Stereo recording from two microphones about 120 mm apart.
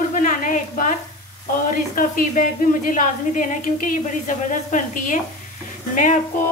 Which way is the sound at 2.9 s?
90° left.